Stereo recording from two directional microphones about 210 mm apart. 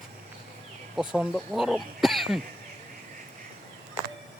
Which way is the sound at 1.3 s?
Centre (ahead or behind).